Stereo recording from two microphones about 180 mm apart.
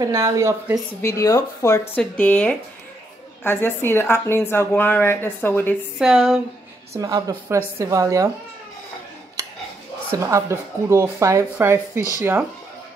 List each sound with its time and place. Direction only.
0.0 s speech: 15° right (ahead or behind)
1.0 s speech: 15° left (ahead or behind)
5.9 s speech: centre (ahead or behind)
7.0 s speech: 20° right (ahead or behind)
10.1 s speech: 15° right (ahead or behind)